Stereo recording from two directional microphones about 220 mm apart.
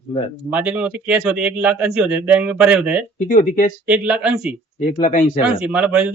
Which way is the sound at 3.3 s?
35° left (ahead or behind).